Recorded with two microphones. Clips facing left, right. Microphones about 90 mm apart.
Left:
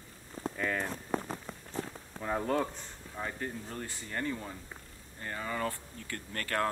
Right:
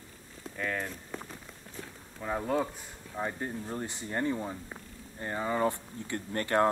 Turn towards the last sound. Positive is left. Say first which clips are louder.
# right 6 dB
turn(degrees=-20)  # may be behind; listen again after turning